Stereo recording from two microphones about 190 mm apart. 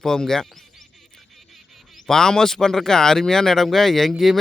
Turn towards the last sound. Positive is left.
turn(degrees=0)  # may be behind; listen again after turning